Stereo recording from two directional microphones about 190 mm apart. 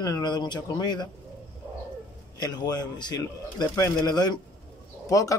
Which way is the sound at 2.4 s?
20° left (ahead or behind).